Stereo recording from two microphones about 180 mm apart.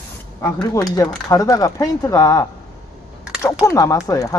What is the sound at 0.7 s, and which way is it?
Speech, 20° left (ahead or behind).